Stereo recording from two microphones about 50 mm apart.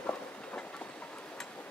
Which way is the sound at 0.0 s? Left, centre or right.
Left.